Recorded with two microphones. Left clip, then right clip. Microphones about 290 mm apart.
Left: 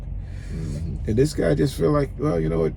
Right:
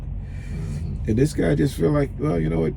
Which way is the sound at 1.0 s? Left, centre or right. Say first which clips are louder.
Left 1 dB; centre.